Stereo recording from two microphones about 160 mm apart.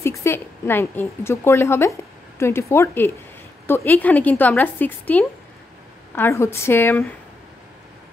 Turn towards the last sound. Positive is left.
turn(degrees=15)  # may be behind; listen again after turning